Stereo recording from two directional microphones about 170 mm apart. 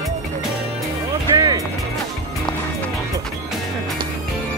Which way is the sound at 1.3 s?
20° right (ahead or behind).